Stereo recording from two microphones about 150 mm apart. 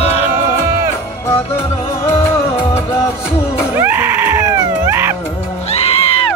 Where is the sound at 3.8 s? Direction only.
15° right (ahead or behind).